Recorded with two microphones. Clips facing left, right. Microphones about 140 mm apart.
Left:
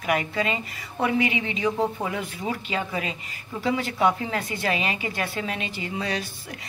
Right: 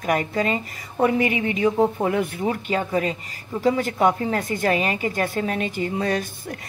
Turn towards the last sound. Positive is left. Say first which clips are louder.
# right 5 dB
turn(degrees=-50)  # may be behind; listen again after turning